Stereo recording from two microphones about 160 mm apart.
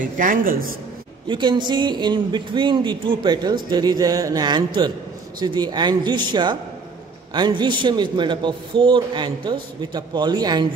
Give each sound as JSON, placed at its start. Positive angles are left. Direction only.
{"t": 0.0, "sound": "speech", "side_deg": -60}
{"t": 1.2, "sound": "a man's voice", "side_deg": -30}